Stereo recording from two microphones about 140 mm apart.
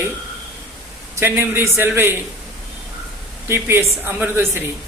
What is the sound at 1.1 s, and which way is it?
Speech, 15° right (ahead or behind).